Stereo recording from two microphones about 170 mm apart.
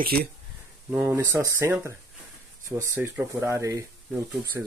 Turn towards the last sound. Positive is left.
turn(degrees=-5)  # may be behind; listen again after turning